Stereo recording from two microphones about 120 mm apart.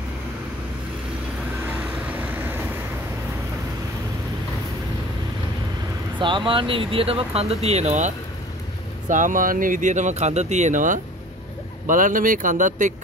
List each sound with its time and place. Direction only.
2.0 s vehicle: 15° right (ahead or behind)
6.1 s speech: 45° right (ahead or behind); by 8.1 s 75° right (ahead or behind)
9.1 s speech: 90° right